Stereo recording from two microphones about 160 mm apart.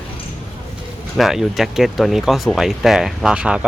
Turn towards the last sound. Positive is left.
turn(degrees=-5)  # may be behind; listen again after turning